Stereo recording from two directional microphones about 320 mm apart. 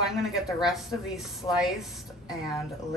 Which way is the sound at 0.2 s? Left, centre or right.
Centre.